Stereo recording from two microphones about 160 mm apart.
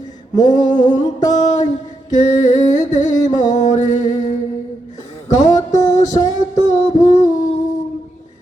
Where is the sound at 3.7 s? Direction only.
50° left (ahead or behind).